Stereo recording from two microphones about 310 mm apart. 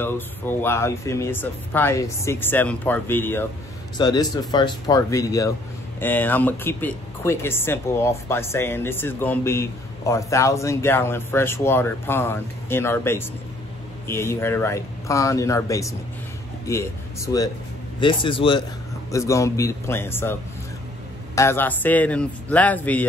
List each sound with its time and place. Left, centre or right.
0.0 s speech: centre
21.4 s speech: centre